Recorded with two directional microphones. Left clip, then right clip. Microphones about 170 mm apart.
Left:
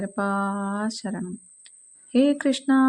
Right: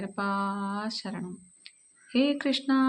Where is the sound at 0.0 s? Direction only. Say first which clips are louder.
Left 4 dB; 45° left (ahead or behind).